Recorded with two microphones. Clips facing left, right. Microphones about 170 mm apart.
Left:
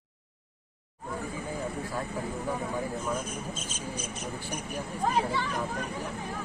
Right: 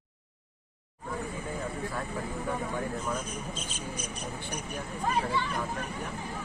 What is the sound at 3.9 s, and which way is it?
Cricket, 20° left (ahead or behind).